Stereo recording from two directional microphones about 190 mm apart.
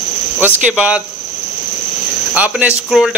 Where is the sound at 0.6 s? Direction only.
5° right (ahead or behind).